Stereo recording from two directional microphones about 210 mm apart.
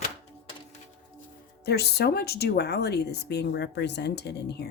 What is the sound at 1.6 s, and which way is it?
Speech, 50° left (ahead or behind).